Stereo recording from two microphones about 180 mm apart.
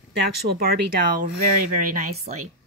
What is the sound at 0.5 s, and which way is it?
Speech, 60° right (ahead or behind).